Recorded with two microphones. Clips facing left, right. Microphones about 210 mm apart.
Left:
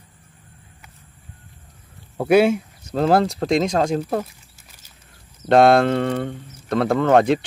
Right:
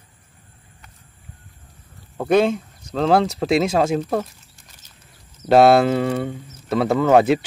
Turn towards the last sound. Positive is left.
turn(degrees=-5)  # may be behind; listen again after turning